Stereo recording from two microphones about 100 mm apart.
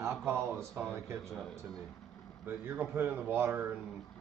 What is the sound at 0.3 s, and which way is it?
Speech, 25° right (ahead or behind).